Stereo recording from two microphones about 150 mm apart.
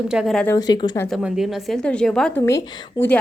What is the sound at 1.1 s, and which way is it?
A woman's voice, centre (ahead or behind).